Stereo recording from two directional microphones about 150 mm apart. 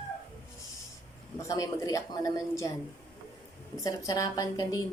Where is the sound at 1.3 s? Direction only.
20° left (ahead or behind).